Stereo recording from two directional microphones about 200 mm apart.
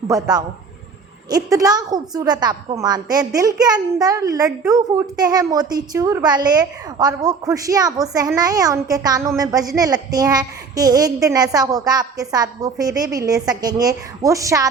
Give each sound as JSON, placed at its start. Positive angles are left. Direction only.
{"t": 0.1, "sound": "a woman's voice", "side_deg": -20}